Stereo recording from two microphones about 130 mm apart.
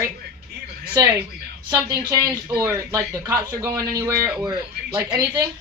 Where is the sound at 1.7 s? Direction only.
30° right (ahead or behind).